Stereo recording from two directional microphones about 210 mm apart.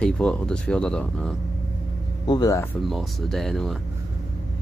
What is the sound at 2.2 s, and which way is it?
Speech, 20° left (ahead or behind).